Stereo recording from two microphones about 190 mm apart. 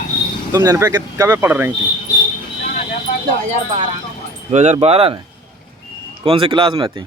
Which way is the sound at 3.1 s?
40° left (ahead or behind).